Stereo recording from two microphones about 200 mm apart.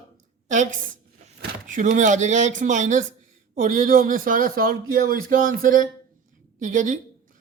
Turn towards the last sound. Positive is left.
turn(degrees=-40)  # may be behind; listen again after turning